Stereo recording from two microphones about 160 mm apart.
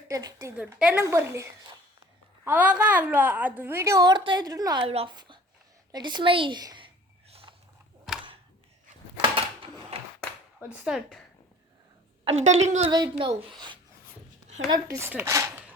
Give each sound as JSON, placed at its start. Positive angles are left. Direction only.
{"t": 0.1, "sound": "a woman's voice", "side_deg": -25}
{"t": 0.5, "sound": "a woman's voice", "side_deg": -5}
{"t": 4.8, "sound": "a woman's voice", "side_deg": -35}
{"t": 7.3, "sound": "a sound", "side_deg": -35}
{"t": 9.2, "sound": "a sound", "side_deg": -35}
{"t": 10.8, "sound": "speech", "side_deg": -5}
{"t": 12.2, "sound": "a woman's voice", "side_deg": -45}
{"t": 12.9, "sound": "a woman's voice", "side_deg": -30}
{"t": 14.7, "sound": "speech", "side_deg": -20}